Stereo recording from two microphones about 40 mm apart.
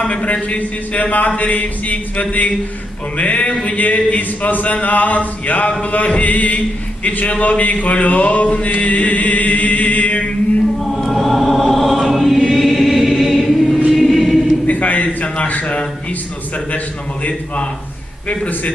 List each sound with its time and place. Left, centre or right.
0.0 s a man's voice: left
0.4 s chant: left
10.8 s choir: centre
14.7 s a man's voice: left
17.2 s chant: left